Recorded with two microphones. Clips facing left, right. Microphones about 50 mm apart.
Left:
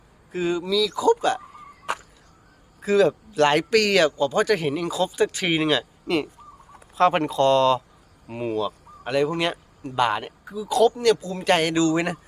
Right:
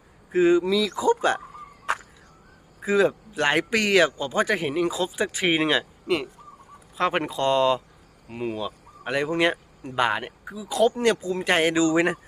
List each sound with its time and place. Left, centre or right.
0.3 s speech: right
2.8 s a man's voice: centre
8.5 s speech: centre
10.9 s a man's voice: right